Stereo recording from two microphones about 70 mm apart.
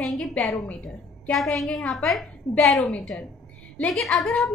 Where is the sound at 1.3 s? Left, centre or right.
Centre.